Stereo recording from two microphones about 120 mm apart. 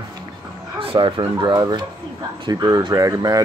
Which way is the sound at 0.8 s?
50° right (ahead or behind).